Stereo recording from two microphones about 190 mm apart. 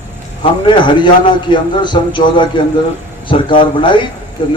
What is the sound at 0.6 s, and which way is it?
A man's voice, 25° left (ahead or behind).